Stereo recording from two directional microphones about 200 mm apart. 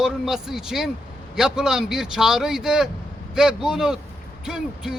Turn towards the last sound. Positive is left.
turn(degrees=-5)  # may be behind; listen again after turning